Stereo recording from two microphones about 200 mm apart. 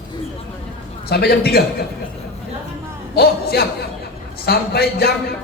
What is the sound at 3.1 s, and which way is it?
A man's voice, 50° left (ahead or behind).